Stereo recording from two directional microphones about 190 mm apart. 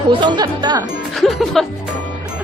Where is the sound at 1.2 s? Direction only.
Centre (ahead or behind).